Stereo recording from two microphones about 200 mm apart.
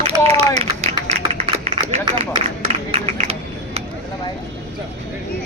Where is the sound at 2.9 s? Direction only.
30° right (ahead or behind).